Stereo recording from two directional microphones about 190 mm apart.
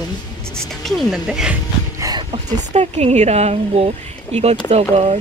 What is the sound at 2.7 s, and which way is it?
Speech, 35° right (ahead or behind).